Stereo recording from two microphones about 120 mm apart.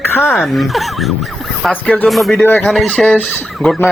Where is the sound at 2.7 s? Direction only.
5° left (ahead or behind).